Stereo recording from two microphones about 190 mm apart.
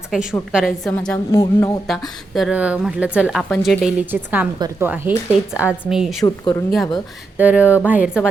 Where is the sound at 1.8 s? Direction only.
Centre (ahead or behind).